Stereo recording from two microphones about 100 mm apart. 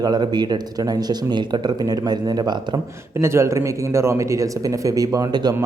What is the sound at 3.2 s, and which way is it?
Speech, 25° right (ahead or behind).